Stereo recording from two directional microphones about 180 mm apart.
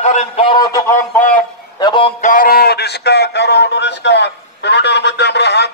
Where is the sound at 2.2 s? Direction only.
50° left (ahead or behind).